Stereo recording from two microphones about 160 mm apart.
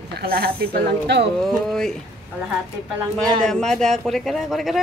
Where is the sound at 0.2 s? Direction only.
70° right (ahead or behind).